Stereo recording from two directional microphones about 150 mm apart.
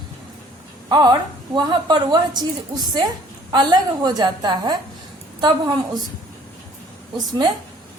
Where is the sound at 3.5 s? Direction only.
30° right (ahead or behind).